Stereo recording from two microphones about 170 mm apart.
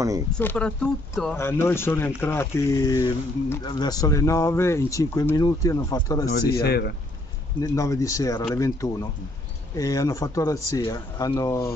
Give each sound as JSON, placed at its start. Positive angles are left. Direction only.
{"t": 0.3, "sound": "speech", "side_deg": 10}
{"t": 6.5, "sound": "speech", "side_deg": 70}
{"t": 7.6, "sound": "speech", "side_deg": 20}